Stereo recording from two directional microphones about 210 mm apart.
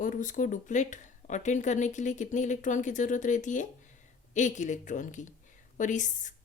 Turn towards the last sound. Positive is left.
turn(degrees=35)  # may be behind; listen again after turning